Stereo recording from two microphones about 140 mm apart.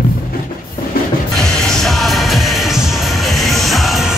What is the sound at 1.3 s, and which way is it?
Music, 5° left (ahead or behind).